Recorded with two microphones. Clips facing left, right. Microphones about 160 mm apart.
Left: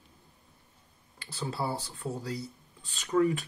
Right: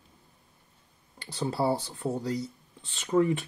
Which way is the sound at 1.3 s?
30° right (ahead or behind).